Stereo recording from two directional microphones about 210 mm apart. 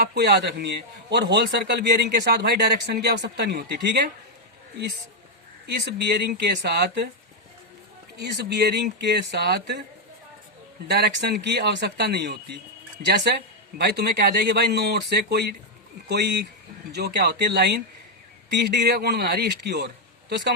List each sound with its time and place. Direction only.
0.0 s a man's voice: 50° right (ahead or behind)
5.6 s a man's voice: 50° right (ahead or behind)
8.2 s a man's voice: 55° right (ahead or behind)
10.8 s a man's voice: 50° right (ahead or behind)